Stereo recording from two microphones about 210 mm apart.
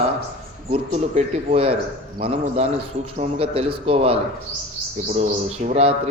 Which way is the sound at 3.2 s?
25° right (ahead or behind).